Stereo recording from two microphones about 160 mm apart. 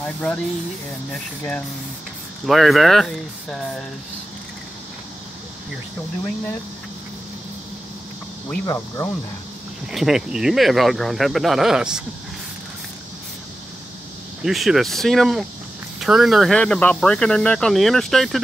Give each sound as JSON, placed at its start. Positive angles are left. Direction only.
{"t": 0.0, "sound": "speech", "side_deg": 10}
{"t": 8.6, "sound": "speech", "side_deg": 15}
{"t": 9.9, "sound": "speech", "side_deg": -5}
{"t": 14.4, "sound": "speech", "side_deg": 0}